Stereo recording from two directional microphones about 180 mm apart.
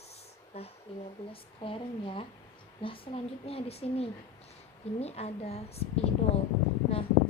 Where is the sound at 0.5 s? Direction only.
35° left (ahead or behind).